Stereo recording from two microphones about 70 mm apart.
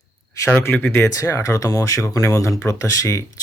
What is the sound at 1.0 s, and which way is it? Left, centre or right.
Speech, left.